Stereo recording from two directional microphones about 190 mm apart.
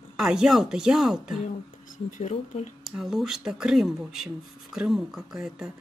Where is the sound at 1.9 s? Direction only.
40° left (ahead or behind).